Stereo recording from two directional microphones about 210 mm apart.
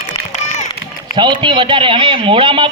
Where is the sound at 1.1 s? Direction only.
20° right (ahead or behind).